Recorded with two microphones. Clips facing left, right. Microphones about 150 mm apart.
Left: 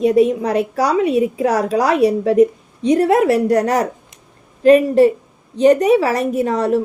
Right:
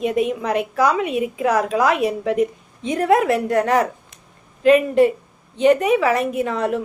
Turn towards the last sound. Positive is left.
turn(degrees=40)  # may be behind; listen again after turning